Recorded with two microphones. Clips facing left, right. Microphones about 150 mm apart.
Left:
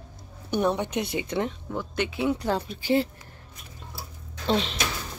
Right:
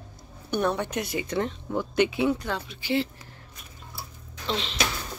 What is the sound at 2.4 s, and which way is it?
Speech, 35° left (ahead or behind).